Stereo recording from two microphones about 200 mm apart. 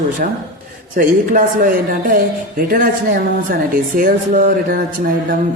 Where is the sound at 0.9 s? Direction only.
40° right (ahead or behind).